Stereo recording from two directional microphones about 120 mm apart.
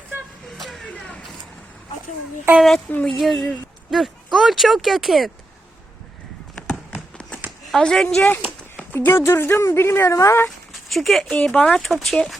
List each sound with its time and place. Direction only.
0.6 s vehicle: centre (ahead or behind)
2.6 s speech: 5° left (ahead or behind)
6.9 s horse: 10° left (ahead or behind)
7.7 s speech: 5° left (ahead or behind)
8.4 s a sound: 10° right (ahead or behind)
8.9 s speech: 20° left (ahead or behind)
10.7 s a sound: centre (ahead or behind)
11.3 s speech: 10° left (ahead or behind)